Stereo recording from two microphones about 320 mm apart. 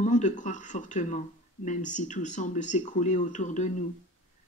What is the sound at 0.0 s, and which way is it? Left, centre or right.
Speech, left.